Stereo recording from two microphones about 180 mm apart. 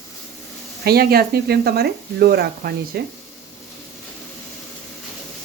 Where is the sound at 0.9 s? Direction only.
60° right (ahead or behind).